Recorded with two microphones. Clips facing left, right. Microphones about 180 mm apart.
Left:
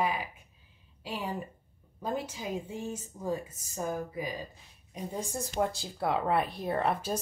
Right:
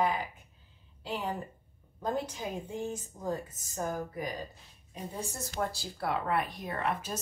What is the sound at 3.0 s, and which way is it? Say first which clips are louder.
A woman's voice: left 1 dB; 10° left (ahead or behind).